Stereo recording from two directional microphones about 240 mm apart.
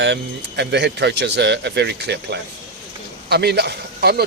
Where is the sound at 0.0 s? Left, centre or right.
Right.